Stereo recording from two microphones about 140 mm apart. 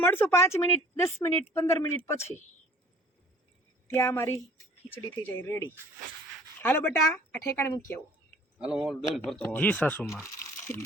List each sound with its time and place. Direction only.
0.0 s speech: 15° left (ahead or behind)
3.8 s a woman's voice: 20° left (ahead or behind)
8.5 s a man's voice: 5° right (ahead or behind)
9.4 s speech: 10° left (ahead or behind)